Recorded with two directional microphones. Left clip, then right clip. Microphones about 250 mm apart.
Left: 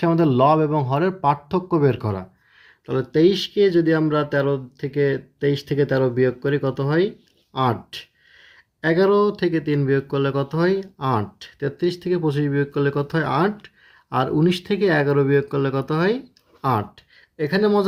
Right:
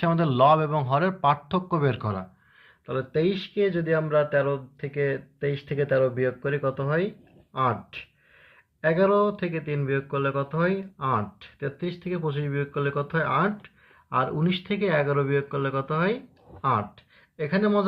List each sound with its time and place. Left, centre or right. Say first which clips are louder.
0.0 s speech: left 4 dB; left
2.8 s speech: left 8 dB; left
3.3 s speech: left 9 dB; centre
3.8 s speech: left 4 dB; left